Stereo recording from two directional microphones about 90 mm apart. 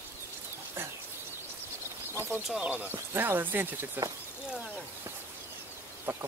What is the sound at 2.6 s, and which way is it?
Speech, 20° right (ahead or behind).